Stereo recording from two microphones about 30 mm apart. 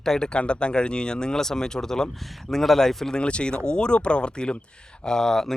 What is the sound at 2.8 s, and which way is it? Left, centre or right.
Speech, centre.